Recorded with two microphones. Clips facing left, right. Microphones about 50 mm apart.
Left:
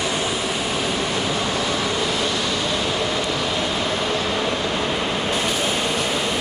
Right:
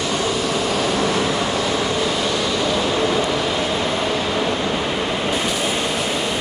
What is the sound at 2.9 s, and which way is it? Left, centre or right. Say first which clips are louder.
Vehicle: right 4 dB; centre.